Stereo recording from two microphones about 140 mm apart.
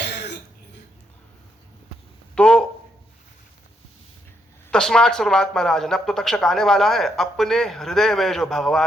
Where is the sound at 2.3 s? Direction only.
5° left (ahead or behind).